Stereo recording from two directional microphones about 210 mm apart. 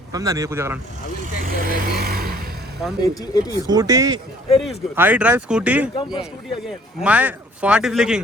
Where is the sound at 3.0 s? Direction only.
15° left (ahead or behind).